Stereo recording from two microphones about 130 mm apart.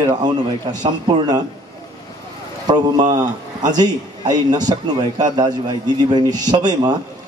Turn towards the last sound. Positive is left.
turn(degrees=-30)  # may be behind; listen again after turning